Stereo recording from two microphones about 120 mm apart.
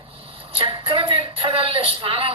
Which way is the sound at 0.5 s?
50° right (ahead or behind).